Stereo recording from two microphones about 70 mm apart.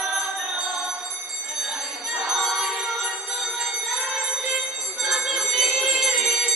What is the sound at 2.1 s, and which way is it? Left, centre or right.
Music, centre.